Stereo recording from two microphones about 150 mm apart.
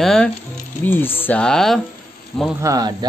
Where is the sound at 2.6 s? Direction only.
25° right (ahead or behind).